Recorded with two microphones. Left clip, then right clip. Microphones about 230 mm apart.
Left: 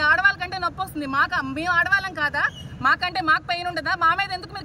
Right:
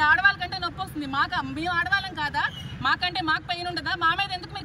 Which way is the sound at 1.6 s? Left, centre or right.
Left.